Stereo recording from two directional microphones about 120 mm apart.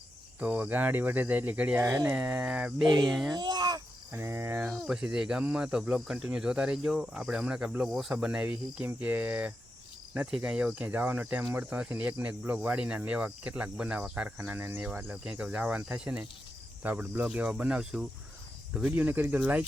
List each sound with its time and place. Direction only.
0.3 s speech: 10° right (ahead or behind)
1.8 s speech: 25° right (ahead or behind)
2.8 s speech: 35° right (ahead or behind)
3.1 s a child's voice: centre (ahead or behind)
3.3 s a sound: 35° right (ahead or behind)
4.1 s cricket: 20° right (ahead or behind)
4.9 s speech: 5° right (ahead or behind)